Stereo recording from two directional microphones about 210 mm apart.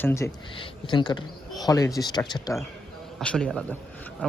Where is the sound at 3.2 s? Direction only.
5° left (ahead or behind).